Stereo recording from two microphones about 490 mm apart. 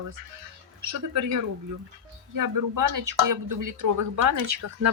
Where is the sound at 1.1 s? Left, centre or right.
Right.